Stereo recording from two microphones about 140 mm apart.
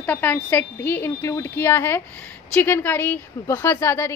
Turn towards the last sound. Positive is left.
turn(degrees=15)  # may be behind; listen again after turning